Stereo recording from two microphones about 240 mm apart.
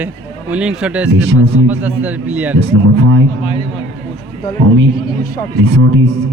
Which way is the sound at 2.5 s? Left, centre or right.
Right.